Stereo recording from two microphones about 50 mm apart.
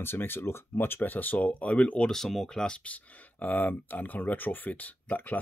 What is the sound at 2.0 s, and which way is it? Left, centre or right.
Speech, centre.